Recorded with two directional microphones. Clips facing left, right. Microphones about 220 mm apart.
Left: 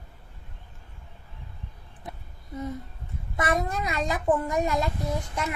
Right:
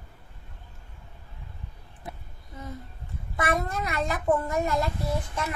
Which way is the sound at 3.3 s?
20° left (ahead or behind).